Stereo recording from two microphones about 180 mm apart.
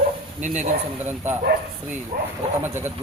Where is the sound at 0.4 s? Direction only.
40° right (ahead or behind).